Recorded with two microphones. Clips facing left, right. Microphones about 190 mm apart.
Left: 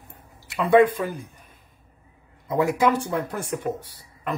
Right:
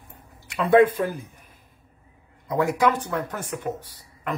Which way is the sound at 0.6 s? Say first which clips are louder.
Even; centre (ahead or behind).